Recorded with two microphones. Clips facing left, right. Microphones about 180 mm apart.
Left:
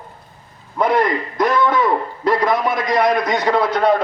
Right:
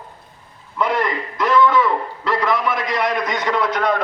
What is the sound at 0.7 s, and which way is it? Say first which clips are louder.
A man's voice: left 4 dB; 40° left (ahead or behind).